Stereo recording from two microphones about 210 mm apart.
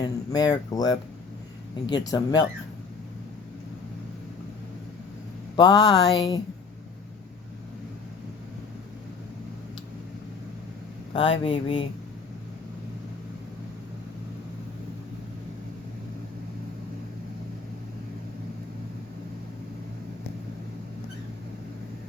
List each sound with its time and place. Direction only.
0.0 s speech: 20° left (ahead or behind)
5.5 s speech: 20° left (ahead or behind)
11.1 s speech: 25° left (ahead or behind)